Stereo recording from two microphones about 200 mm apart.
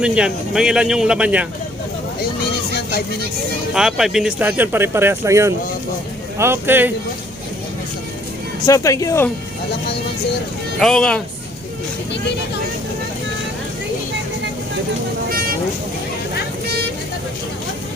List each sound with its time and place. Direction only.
0.0 s speech: 5° right (ahead or behind)
3.8 s speech: centre (ahead or behind)
8.6 s speech: 15° left (ahead or behind)
10.8 s speech: centre (ahead or behind)